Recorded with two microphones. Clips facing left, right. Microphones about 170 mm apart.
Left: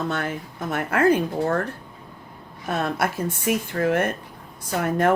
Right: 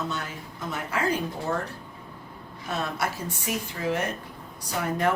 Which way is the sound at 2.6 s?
55° left (ahead or behind).